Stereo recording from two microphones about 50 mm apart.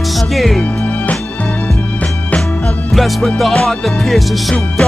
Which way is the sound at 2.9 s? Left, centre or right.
Centre.